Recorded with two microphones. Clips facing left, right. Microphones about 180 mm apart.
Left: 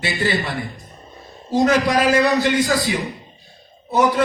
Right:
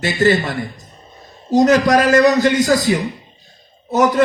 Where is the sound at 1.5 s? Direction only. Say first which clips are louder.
Right 4 dB; 45° right (ahead or behind).